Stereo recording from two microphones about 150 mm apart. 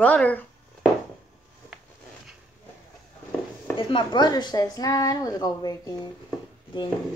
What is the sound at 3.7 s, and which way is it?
A woman's voice, 30° left (ahead or behind).